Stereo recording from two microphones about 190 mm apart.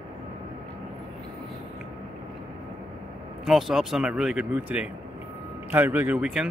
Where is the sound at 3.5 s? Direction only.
Centre (ahead or behind).